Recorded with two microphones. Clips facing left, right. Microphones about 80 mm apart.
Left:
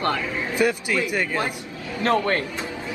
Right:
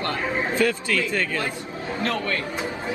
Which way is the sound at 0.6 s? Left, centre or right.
Centre.